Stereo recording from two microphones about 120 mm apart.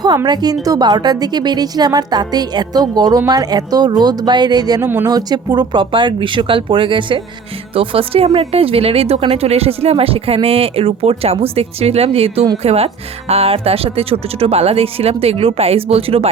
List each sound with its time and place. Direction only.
0.6 s a woman's voice: 30° right (ahead or behind); by 16.3 s 55° right (ahead or behind)